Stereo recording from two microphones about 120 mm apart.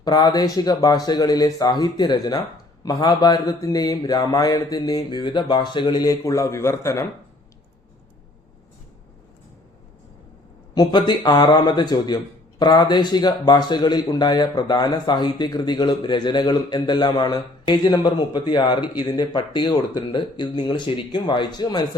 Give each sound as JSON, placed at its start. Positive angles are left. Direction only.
{"t": 0.0, "sound": "a man's voice", "side_deg": 35}
{"t": 10.8, "sound": "a man's voice", "side_deg": 35}